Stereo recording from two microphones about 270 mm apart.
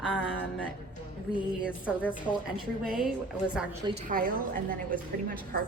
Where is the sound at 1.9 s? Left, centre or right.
Centre.